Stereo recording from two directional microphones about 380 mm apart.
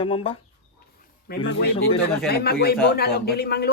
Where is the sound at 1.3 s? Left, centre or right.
Left.